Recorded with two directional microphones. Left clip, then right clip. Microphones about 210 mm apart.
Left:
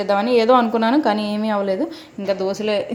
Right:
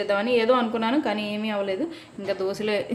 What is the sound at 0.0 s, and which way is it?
A woman's voice, 20° left (ahead or behind).